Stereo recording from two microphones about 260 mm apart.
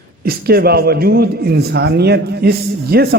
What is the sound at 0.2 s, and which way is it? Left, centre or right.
A man's voice, right.